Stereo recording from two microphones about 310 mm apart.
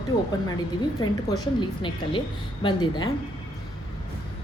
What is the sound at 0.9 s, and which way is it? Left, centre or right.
A woman's voice, centre.